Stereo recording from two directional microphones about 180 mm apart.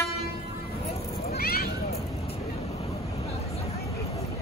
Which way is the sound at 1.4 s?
55° left (ahead or behind).